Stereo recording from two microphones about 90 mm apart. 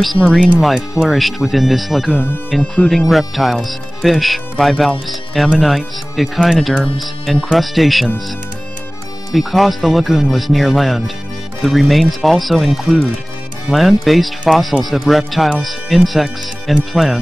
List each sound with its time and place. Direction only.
0.0 s speech: centre (ahead or behind)
2.1 s speech: 20° left (ahead or behind)
3.1 s speech: centre (ahead or behind)
9.3 s speech: centre (ahead or behind)